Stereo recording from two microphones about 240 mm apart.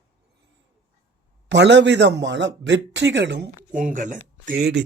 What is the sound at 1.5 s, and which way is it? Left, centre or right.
Speech, right.